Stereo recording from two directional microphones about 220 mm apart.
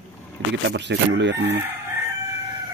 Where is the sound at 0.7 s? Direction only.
55° right (ahead or behind).